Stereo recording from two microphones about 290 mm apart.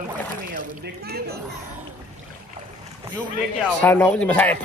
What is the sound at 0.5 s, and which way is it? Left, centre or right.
Speech, right.